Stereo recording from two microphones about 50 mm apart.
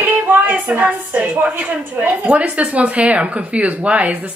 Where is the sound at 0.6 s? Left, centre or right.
Right.